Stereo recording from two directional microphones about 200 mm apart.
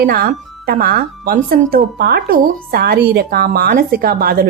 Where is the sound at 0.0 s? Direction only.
50° right (ahead or behind).